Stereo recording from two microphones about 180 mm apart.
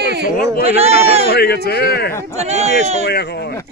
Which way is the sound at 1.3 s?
65° left (ahead or behind).